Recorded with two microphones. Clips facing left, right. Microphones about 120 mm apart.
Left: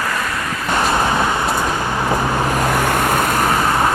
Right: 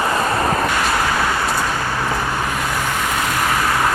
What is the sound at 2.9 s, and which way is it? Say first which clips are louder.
Vehicle: left 4 dB; 50° left (ahead or behind).